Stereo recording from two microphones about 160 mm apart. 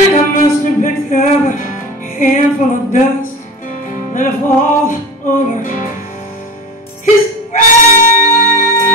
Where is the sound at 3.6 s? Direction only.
60° left (ahead or behind).